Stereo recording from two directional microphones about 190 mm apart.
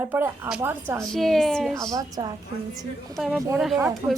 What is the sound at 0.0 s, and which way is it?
Speech, 10° right (ahead or behind).